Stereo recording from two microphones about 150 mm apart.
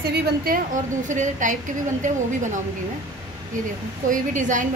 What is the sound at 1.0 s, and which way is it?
A woman's voice, 55° right (ahead or behind).